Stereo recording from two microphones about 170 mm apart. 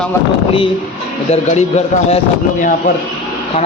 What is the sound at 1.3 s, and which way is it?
Speech, 40° left (ahead or behind).